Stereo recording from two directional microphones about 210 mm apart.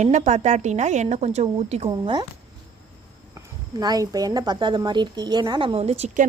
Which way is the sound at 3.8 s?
20° right (ahead or behind).